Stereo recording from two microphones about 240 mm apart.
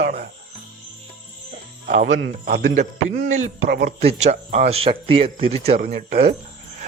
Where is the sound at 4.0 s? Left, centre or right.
Right.